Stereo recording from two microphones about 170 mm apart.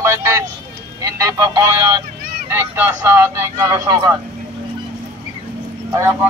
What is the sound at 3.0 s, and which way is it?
Speech, 15° right (ahead or behind).